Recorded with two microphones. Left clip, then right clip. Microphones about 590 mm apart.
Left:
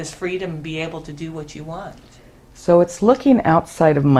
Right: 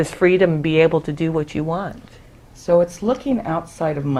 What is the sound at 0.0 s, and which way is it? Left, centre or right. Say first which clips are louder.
Speech: right 10 dB; right.